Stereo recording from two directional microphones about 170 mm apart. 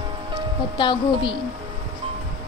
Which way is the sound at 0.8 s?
30° left (ahead or behind).